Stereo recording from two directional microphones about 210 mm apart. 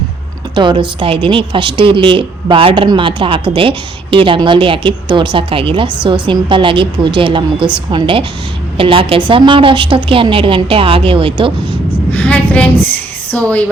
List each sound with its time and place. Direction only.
0.5 s speech: 20° right (ahead or behind)
12.1 s a woman's voice: 5° left (ahead or behind)